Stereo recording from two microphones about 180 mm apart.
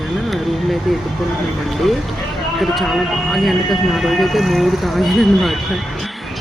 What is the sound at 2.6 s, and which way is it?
Speech, centre (ahead or behind).